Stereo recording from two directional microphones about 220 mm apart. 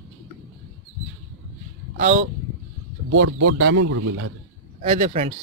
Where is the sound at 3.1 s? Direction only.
70° right (ahead or behind); by 4.3 s 85° right.